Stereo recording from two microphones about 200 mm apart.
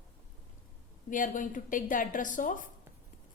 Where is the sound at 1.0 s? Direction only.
40° left (ahead or behind).